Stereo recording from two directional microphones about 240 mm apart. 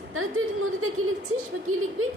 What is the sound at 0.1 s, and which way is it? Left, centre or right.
A woman's voice, right.